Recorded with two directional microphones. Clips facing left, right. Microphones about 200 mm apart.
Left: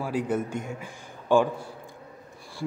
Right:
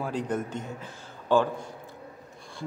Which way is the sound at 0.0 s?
10° left (ahead or behind).